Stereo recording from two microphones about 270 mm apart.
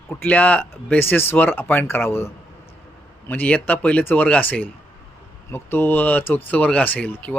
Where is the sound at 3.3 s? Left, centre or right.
Centre.